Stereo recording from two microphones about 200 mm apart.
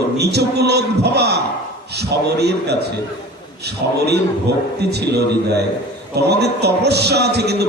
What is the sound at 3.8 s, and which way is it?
Speech, 55° right (ahead or behind).